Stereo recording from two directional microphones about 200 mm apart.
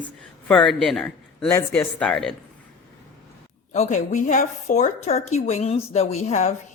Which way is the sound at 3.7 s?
35° left (ahead or behind).